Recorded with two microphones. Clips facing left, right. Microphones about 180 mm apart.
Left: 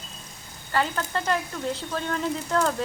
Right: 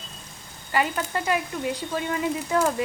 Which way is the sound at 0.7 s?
10° right (ahead or behind).